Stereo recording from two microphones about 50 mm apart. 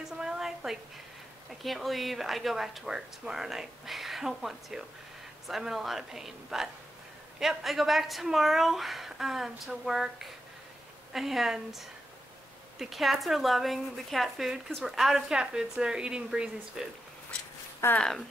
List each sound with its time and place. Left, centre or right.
0.2 s a sound: centre
1.6 s speech: centre
17.9 s speech: centre